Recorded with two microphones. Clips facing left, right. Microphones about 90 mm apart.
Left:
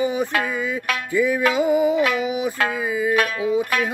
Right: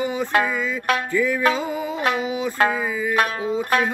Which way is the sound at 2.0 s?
30° right (ahead or behind).